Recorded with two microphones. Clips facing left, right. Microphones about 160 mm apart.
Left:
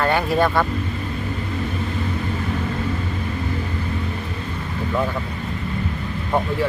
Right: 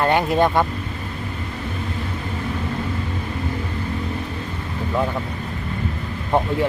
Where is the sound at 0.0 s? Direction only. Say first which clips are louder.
Right 1 dB; 20° right (ahead or behind).